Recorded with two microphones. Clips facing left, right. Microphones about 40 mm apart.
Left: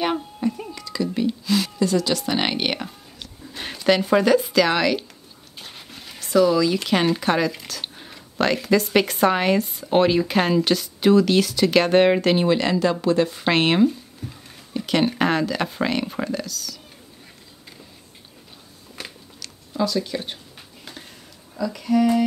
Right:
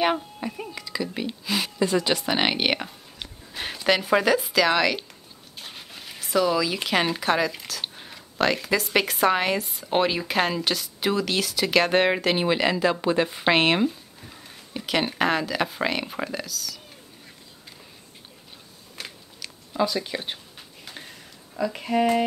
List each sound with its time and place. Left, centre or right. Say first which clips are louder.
0.0 s a woman's voice: left 1 dB; centre
13.5 s a sound: left 2 dB; centre
14.8 s speech: left 4 dB; centre
19.0 s biting: left 2 dB; centre
19.4 s a sound: left 1 dB; centre
21.5 s speech: left 3 dB; right